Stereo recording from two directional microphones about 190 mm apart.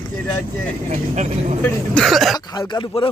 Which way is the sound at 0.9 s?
35° right (ahead or behind).